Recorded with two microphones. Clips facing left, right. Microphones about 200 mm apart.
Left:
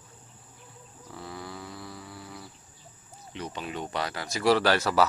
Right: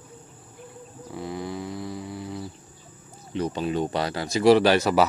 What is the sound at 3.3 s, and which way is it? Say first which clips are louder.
Speech: right 10 dB; 35° right (ahead or behind).